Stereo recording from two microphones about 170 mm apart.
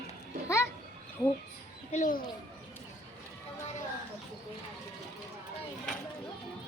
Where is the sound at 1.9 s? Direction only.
50° left (ahead or behind).